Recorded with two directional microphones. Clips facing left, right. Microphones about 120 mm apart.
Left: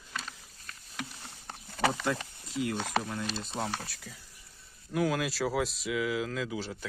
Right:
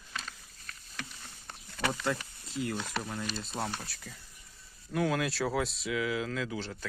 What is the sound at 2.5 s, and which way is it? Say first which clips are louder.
Speech: left 4 dB; 65° left (ahead or behind).